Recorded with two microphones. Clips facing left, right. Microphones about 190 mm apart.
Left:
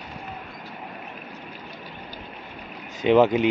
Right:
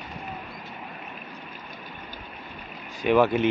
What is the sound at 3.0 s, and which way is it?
Speech, 20° left (ahead or behind).